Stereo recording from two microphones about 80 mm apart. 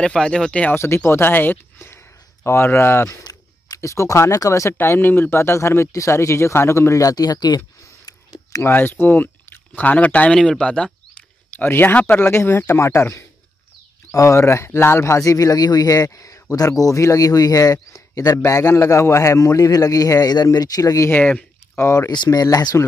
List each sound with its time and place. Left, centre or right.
0.0 s speech: centre
0.7 s speech: left
4.7 s speech: left
8.6 s speech: left
11.5 s a man's voice: left
21.1 s speech: centre
21.7 s speech: left
22.1 s speech: left